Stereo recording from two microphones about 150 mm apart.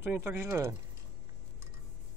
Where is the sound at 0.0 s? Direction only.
15° right (ahead or behind).